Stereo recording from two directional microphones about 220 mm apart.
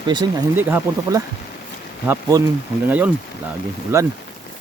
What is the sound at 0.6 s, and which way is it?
Speech, 10° right (ahead or behind).